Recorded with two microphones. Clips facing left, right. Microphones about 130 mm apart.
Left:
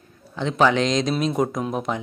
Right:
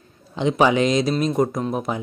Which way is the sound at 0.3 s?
15° right (ahead or behind).